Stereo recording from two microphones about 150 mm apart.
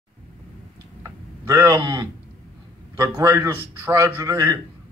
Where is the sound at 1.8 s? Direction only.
30° right (ahead or behind).